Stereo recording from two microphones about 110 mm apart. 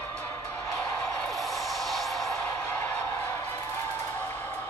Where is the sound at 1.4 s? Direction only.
Centre (ahead or behind).